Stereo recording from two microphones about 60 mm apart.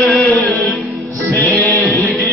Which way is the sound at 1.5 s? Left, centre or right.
Left.